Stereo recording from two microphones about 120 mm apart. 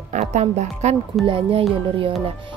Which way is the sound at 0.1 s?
75° right (ahead or behind).